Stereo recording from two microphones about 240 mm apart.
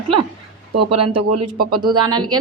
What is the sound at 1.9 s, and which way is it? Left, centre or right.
Speech, centre.